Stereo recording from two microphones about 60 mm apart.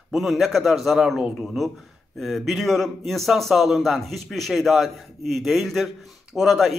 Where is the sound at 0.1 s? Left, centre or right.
Centre.